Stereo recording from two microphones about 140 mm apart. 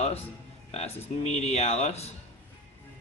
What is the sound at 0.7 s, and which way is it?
Speech, 50° left (ahead or behind).